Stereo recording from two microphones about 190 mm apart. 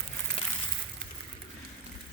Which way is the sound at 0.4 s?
30° left (ahead or behind).